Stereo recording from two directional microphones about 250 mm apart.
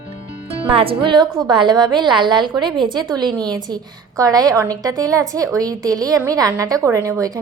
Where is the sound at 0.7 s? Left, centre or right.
Right.